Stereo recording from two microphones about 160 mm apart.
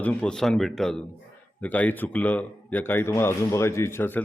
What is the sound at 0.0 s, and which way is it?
A man's voice, 10° left (ahead or behind).